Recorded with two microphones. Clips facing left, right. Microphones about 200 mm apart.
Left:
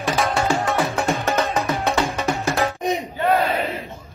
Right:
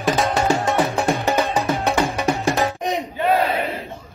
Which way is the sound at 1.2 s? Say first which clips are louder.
Right 2 dB; 15° right (ahead or behind).